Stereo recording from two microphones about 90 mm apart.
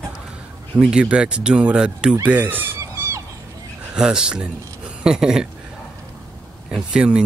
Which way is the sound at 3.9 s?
10° right (ahead or behind).